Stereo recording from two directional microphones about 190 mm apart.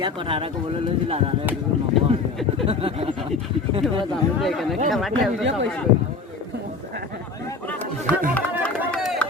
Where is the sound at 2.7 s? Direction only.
30° right (ahead or behind).